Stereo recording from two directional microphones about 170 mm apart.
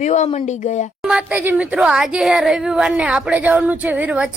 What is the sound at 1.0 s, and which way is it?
A woman's voice, 5° right (ahead or behind).